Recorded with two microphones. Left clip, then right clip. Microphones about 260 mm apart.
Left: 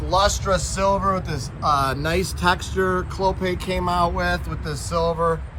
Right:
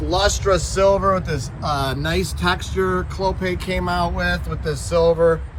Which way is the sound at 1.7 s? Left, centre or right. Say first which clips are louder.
Left 2 dB; left.